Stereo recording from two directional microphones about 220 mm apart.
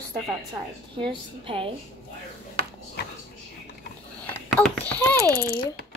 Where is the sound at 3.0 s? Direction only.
50° left (ahead or behind).